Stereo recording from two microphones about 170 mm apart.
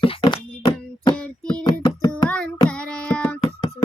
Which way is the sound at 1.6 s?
25° left (ahead or behind).